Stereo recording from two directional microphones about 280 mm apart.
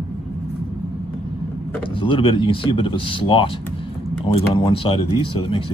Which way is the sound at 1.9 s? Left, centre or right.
Centre.